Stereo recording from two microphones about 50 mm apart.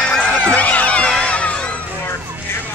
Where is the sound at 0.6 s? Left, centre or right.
Left.